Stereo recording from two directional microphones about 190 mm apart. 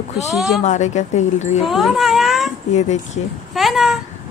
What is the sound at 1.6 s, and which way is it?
Speech, centre (ahead or behind).